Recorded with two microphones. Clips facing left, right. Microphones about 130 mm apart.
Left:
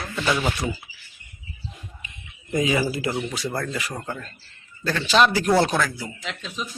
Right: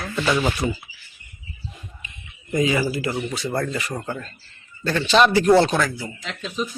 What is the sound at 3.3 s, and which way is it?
Speech, centre (ahead or behind).